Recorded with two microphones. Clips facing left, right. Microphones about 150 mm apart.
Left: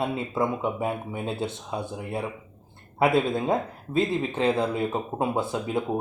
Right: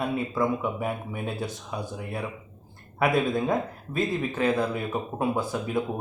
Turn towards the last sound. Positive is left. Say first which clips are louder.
# left 1 dB
turn(degrees=25)  # may be behind; listen again after turning